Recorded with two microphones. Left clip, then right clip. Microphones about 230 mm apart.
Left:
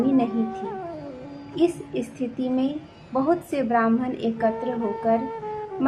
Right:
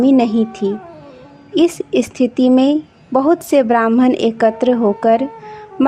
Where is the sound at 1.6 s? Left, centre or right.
Right.